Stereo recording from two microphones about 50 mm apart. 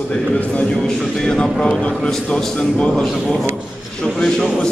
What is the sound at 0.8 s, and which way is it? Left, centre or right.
A man's voice, centre.